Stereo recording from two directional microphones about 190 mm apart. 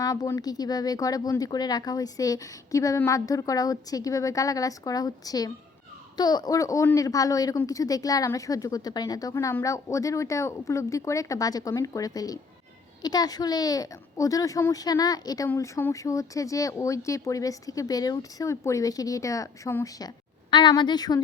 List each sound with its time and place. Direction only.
0.0 s speech: 20° left (ahead or behind)